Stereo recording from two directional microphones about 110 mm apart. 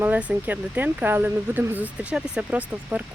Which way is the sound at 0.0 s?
10° right (ahead or behind).